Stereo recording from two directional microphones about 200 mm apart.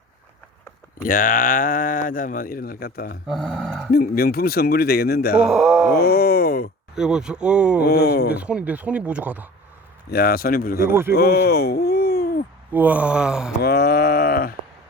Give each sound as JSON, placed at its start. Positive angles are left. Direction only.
{"t": 1.0, "sound": "speech", "side_deg": 45}
{"t": 3.2, "sound": "speech", "side_deg": 0}
{"t": 3.9, "sound": "speech", "side_deg": 50}
{"t": 5.5, "sound": "speech", "side_deg": -5}
{"t": 5.9, "sound": "speech", "side_deg": 50}
{"t": 6.9, "sound": "speech", "side_deg": -5}
{"t": 7.8, "sound": "speech", "side_deg": 55}
{"t": 8.4, "sound": "speech", "side_deg": -5}
{"t": 10.1, "sound": "speech", "side_deg": 50}
{"t": 11.1, "sound": "a sound", "side_deg": 50}
{"t": 12.7, "sound": "speech", "side_deg": -10}
{"t": 13.6, "sound": "a sound", "side_deg": 55}